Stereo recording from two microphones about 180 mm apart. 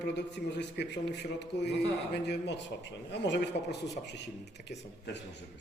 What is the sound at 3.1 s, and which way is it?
Speech, 75° left (ahead or behind).